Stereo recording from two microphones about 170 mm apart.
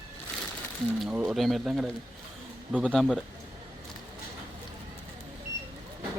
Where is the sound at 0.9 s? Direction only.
5° right (ahead or behind).